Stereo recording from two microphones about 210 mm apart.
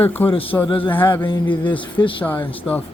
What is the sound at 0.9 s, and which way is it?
Speech, 10° left (ahead or behind).